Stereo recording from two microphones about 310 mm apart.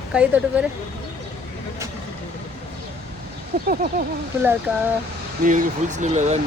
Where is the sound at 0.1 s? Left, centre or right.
Centre.